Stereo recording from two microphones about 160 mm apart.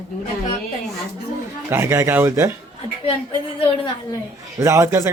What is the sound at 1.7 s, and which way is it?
Speech, 15° right (ahead or behind).